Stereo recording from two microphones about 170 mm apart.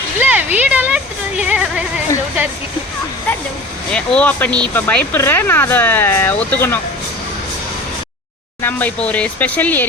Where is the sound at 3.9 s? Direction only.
5° left (ahead or behind).